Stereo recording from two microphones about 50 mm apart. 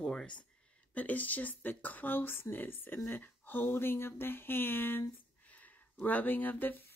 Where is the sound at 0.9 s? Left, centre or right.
Left.